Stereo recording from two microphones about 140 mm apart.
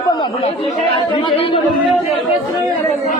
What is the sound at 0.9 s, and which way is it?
Speech, 40° left (ahead or behind).